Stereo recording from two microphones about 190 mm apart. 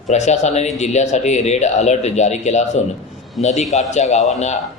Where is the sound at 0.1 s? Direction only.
35° left (ahead or behind).